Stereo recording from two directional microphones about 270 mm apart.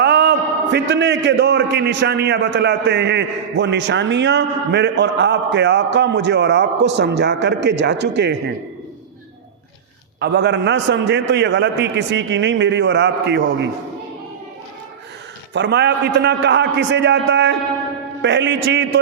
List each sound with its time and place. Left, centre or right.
0.0 s a man's voice: right
10.2 s a man's voice: right
15.5 s a man's voice: right